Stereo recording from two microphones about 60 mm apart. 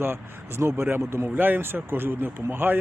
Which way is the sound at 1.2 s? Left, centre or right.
Right.